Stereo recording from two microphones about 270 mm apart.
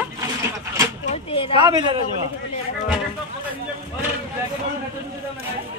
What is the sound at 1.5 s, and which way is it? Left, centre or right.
Speech, centre.